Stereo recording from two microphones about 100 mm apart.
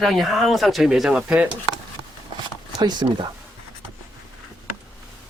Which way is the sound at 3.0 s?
45° right (ahead or behind).